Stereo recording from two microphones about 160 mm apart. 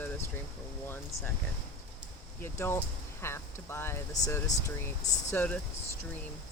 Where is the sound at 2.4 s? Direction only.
15° left (ahead or behind).